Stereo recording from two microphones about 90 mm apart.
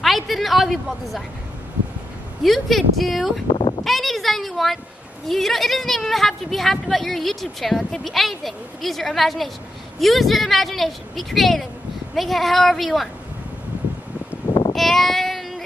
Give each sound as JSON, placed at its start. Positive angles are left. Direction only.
{"t": 0.0, "sound": "a woman's voice", "side_deg": 0}
{"t": 2.4, "sound": "a woman's voice", "side_deg": 0}
{"t": 3.5, "sound": "a sound", "side_deg": 70}
{"t": 3.8, "sound": "a sound", "side_deg": 0}
{"t": 5.3, "sound": "a woman's voice", "side_deg": 0}
{"t": 14.7, "sound": "child singing", "side_deg": 0}